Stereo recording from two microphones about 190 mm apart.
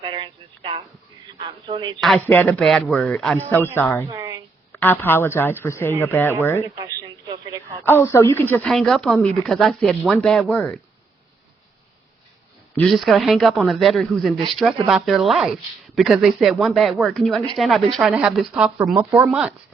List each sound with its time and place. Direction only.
0.0 s a sound: 25° right (ahead or behind)
1.3 s speech: 25° right (ahead or behind)
2.0 s a woman's voice: centre (ahead or behind)
4.1 s a sound: 20° right (ahead or behind)
4.7 s a woman's voice: 10° left (ahead or behind)
6.8 s radio: 20° right (ahead or behind)
7.9 s speech: 10° left (ahead or behind)
12.7 s speech: 5° left (ahead or behind)